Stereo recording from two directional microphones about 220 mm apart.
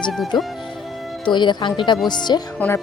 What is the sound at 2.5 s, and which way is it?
Speech, 10° left (ahead or behind).